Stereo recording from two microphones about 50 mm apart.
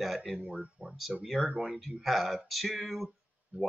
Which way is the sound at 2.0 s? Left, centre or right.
Centre.